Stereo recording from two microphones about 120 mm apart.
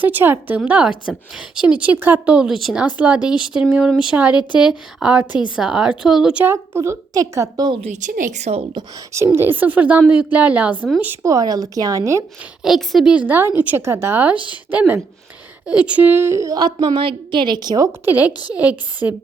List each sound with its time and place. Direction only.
0.0 s a woman's voice: 15° right (ahead or behind)
2.8 s a woman's voice: 10° right (ahead or behind)
6.4 s a woman's voice: 20° right (ahead or behind)
7.8 s speech: 80° right
9.1 s a woman's voice: 20° right (ahead or behind)
11.2 s a woman's voice: 30° right (ahead or behind)
12.6 s a woman's voice: centre (ahead or behind)
13.1 s a woman's voice: 15° right (ahead or behind); by 17.9 s 30° right (ahead or behind)
18.0 s a woman's voice: 15° right (ahead or behind)